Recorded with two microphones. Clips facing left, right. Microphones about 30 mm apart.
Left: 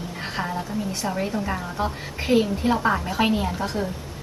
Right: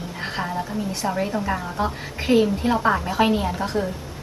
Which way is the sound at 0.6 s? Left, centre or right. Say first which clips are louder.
Right 1 dB; centre.